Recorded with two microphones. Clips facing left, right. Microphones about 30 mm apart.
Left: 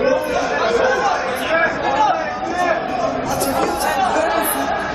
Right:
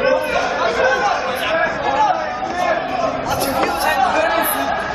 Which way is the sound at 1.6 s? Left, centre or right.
Centre.